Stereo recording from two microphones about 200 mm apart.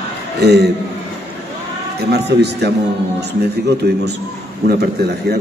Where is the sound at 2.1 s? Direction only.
55° right (ahead or behind).